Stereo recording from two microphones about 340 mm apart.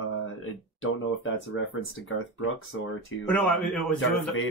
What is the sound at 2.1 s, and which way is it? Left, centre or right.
Speech, left.